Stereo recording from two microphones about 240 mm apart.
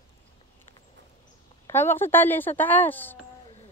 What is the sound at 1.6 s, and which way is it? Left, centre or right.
A woman's voice, centre.